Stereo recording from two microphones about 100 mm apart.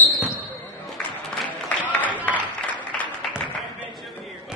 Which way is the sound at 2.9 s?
10° left (ahead or behind).